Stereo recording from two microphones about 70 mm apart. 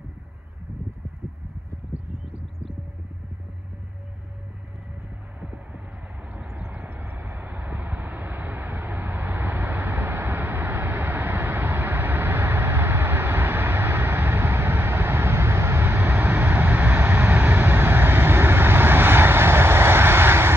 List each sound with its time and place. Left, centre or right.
5.4 s heart sounds: centre
6.3 s vehicle: right